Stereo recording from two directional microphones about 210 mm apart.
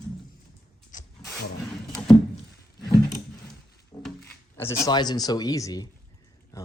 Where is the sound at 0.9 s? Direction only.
40° left (ahead or behind).